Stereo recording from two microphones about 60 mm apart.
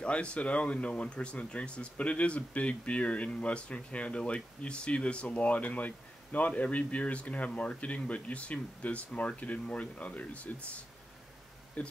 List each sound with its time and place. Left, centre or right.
0.0 s speech: centre
11.8 s speech: left